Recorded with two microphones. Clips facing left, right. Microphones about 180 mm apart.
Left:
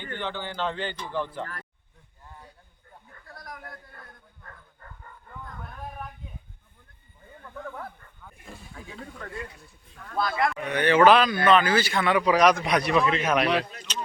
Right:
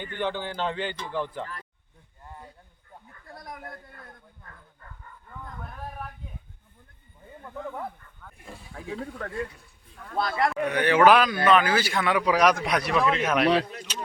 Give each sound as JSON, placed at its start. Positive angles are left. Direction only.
{"t": 0.0, "sound": "a man's voice", "side_deg": -10}
{"t": 3.2, "sound": "a sound", "side_deg": -25}
{"t": 8.2, "sound": "wild animals", "side_deg": 5}
{"t": 10.2, "sound": "speech", "side_deg": -40}
{"t": 10.7, "sound": "a man's voice", "side_deg": -10}